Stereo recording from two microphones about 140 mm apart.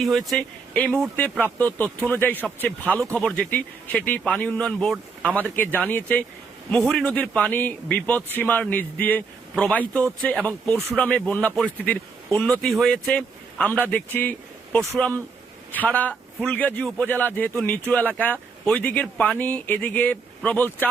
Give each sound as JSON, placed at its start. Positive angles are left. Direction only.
{"t": 0.0, "sound": "speech", "side_deg": 0}